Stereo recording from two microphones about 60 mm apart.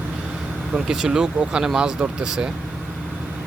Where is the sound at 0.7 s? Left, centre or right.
Centre.